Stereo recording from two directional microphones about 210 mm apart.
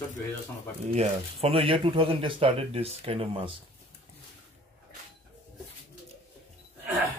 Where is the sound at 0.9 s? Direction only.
30° right (ahead or behind).